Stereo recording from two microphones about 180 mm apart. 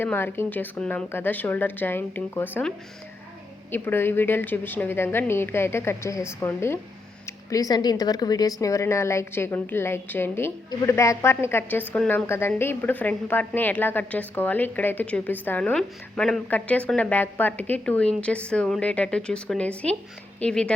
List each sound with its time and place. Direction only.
0.0 s a woman's voice: 10° left (ahead or behind)
3.7 s a woman's voice: 10° left (ahead or behind)